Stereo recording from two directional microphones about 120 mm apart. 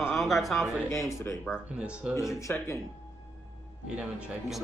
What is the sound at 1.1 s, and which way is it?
Speech, 25° left (ahead or behind).